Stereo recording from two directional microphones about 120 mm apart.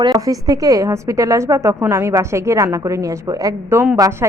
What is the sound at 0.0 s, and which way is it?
A woman's voice, 35° right (ahead or behind).